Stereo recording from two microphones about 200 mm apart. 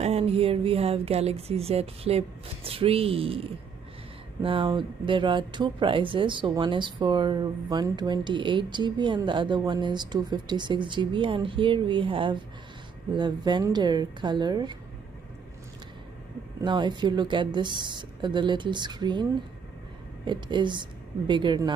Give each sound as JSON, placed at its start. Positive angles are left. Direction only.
{"t": 0.0, "sound": "speech", "side_deg": -30}
{"t": 16.6, "sound": "speech", "side_deg": -25}
{"t": 20.2, "sound": "speech", "side_deg": -20}